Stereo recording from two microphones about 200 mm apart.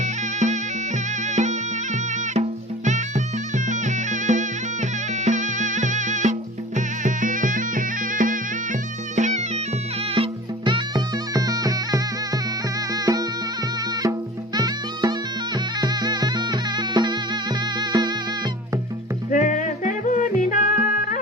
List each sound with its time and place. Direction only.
0.0 s music: 35° right (ahead or behind)
10.2 s music: 25° right (ahead or behind)
19.3 s music: 40° left (ahead or behind)